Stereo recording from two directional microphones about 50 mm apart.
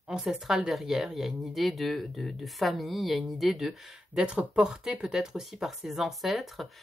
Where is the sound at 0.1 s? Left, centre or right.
Centre.